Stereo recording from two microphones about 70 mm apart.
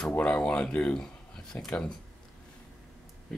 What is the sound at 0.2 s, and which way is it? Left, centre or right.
Speech, centre.